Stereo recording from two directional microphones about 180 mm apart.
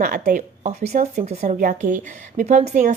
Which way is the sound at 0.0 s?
50° right (ahead or behind).